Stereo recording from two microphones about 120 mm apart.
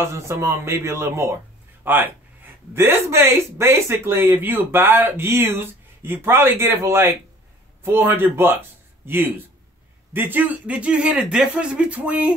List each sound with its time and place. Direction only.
0.0 s speech: 25° right (ahead or behind)